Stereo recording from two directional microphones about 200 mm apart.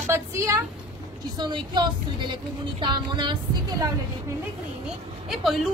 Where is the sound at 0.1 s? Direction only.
15° right (ahead or behind).